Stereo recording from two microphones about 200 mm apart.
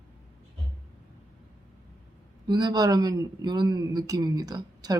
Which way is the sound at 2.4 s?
20° right (ahead or behind).